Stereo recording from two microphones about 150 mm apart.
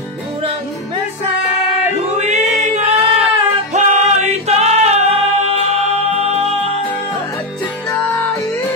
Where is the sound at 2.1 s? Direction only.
50° right (ahead or behind).